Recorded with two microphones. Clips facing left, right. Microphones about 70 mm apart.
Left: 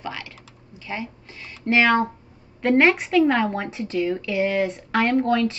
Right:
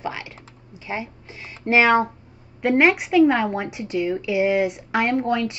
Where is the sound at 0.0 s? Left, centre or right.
Right.